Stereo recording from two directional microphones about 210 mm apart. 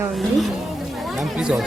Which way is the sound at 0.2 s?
Centre (ahead or behind).